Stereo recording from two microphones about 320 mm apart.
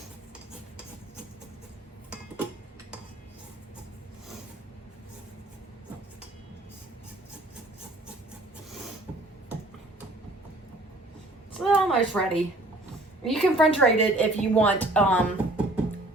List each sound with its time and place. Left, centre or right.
11.5 s a woman's voice: centre